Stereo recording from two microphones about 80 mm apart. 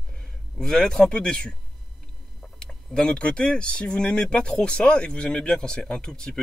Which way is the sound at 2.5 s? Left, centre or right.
Centre.